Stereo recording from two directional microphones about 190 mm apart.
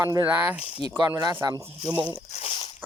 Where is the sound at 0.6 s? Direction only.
35° left (ahead or behind).